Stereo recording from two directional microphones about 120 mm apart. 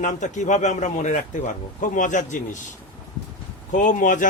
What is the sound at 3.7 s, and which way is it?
Speech, 90° left.